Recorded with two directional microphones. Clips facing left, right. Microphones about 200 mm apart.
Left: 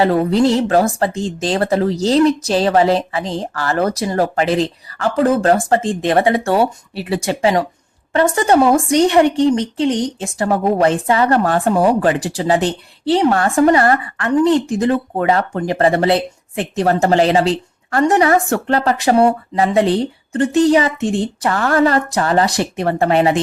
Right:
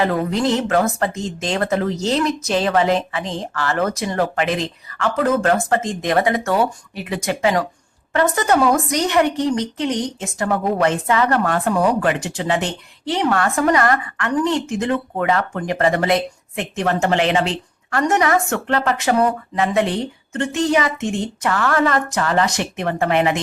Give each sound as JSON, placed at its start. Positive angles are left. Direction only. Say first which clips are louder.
{"t": 0.0, "sound": "a woman's voice", "louder": "left 5 dB", "side_deg": 35}